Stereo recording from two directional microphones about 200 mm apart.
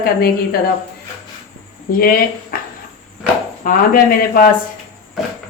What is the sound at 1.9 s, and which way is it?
Speech, 45° left (ahead or behind).